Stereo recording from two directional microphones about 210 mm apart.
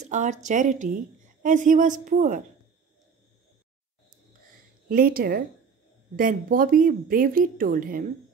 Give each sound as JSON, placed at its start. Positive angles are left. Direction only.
{"t": 0.0, "sound": "speech", "side_deg": -35}
{"t": 4.8, "sound": "speech", "side_deg": -45}